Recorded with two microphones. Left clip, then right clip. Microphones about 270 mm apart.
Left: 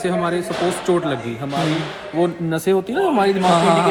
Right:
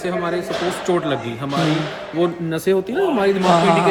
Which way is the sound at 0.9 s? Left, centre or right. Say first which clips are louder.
Left 1 dB; centre.